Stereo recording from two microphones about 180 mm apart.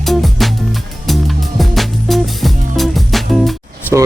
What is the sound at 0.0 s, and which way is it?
Music, centre (ahead or behind).